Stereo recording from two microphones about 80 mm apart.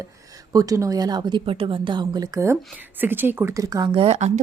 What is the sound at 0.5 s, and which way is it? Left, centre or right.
Speech, right.